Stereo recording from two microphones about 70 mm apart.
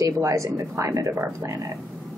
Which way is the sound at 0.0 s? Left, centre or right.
Right.